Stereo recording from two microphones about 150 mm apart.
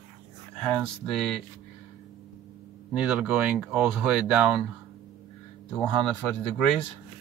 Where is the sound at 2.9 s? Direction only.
5° right (ahead or behind).